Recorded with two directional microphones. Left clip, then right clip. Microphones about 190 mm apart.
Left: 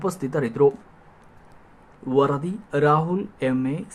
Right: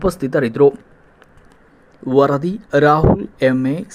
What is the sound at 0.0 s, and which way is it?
Speech, 15° right (ahead or behind).